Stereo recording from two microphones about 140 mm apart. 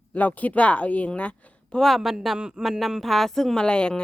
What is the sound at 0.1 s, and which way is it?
Speech, 10° left (ahead or behind).